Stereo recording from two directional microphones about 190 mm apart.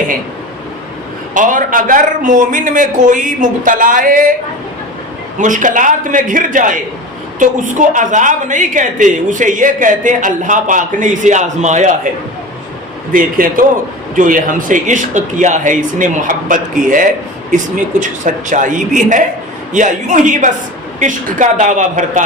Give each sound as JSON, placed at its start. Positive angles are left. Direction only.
{"t": 1.3, "sound": "speech", "side_deg": -45}
{"t": 5.4, "sound": "a woman's voice", "side_deg": -40}
{"t": 13.1, "sound": "a woman's voice", "side_deg": -45}